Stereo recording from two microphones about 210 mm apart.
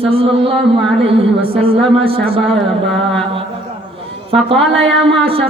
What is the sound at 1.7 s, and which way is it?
Speech, 25° right (ahead or behind).